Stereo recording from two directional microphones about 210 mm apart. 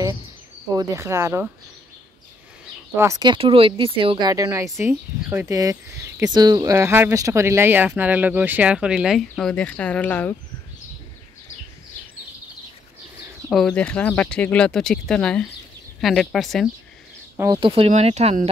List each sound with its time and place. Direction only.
0.7 s speech: 15° right (ahead or behind)
3.0 s speech: 15° right (ahead or behind); by 10.3 s 5° left (ahead or behind)
13.5 s speech: centre (ahead or behind)
17.4 s speech: 20° right (ahead or behind)